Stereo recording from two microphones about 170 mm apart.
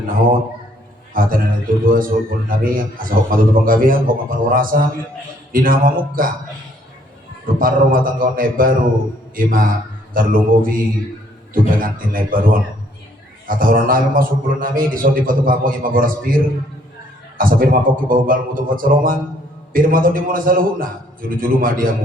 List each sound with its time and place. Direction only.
1.1 s a man's voice: 55° right (ahead or behind)
7.4 s a man's voice: 55° right (ahead or behind)